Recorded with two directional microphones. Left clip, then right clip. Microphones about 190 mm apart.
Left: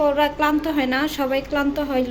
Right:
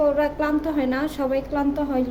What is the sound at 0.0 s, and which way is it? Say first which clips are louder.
A woman's voice: left 2 dB; 5° right (ahead or behind).